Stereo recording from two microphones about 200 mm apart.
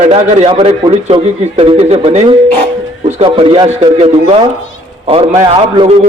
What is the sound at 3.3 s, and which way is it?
A man's voice, 25° right (ahead or behind).